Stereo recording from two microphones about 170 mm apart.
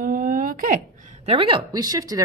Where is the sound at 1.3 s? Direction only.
30° right (ahead or behind).